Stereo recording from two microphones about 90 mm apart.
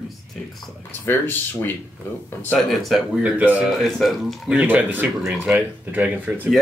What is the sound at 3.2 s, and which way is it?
Speech, 15° right (ahead or behind).